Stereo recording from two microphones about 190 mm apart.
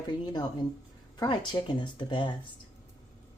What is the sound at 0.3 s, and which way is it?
Speech, 20° left (ahead or behind).